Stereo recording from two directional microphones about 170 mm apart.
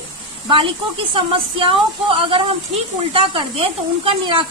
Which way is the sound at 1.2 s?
30° right (ahead or behind).